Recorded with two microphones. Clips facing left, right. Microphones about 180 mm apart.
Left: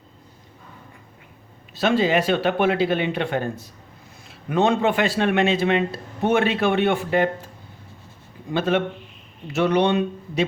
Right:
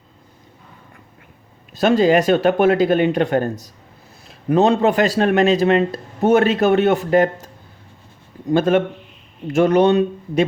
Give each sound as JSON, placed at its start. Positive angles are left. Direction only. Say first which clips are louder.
{"t": 1.7, "sound": "speech", "louder": "right 5 dB", "side_deg": -45}